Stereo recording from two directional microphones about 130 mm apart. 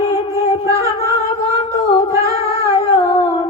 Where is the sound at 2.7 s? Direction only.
40° left (ahead or behind).